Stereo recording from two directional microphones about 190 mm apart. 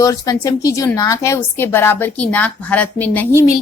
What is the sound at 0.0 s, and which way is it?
A woman's voice, 20° left (ahead or behind).